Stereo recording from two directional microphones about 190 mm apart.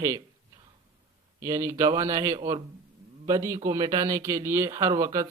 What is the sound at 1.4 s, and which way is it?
Speech, 15° right (ahead or behind).